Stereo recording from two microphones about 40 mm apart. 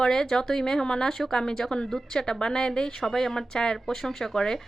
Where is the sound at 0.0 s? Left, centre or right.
Centre.